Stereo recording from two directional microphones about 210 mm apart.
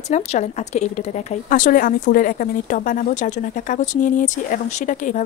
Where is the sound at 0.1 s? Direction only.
35° left (ahead or behind).